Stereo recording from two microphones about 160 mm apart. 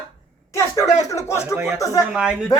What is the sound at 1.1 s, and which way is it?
Speech, 15° left (ahead or behind).